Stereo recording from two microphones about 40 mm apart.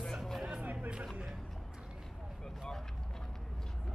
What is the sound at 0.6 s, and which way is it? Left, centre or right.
Music, right.